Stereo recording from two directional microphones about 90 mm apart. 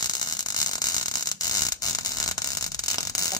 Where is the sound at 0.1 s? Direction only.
45° left (ahead or behind).